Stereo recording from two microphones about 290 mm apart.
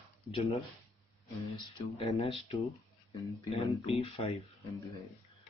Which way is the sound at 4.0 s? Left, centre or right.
Centre.